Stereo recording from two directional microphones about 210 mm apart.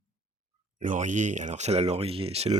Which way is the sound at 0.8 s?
35° right (ahead or behind).